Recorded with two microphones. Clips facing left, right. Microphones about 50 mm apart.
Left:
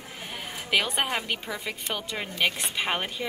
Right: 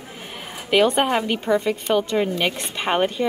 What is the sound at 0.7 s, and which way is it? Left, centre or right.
A woman's voice, centre.